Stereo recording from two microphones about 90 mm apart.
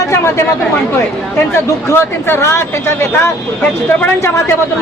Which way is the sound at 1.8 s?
25° left (ahead or behind).